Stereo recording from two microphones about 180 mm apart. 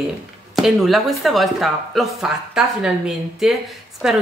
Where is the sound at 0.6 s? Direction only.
Centre (ahead or behind).